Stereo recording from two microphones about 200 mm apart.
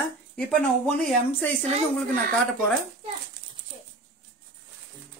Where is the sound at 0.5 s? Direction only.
5° left (ahead or behind).